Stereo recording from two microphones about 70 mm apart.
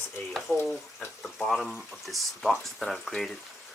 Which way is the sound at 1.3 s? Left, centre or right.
Centre.